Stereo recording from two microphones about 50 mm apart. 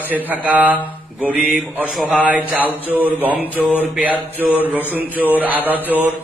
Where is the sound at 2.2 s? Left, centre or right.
Right.